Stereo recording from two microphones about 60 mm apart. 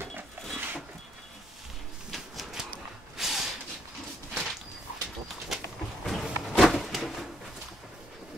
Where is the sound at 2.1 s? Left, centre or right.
Centre.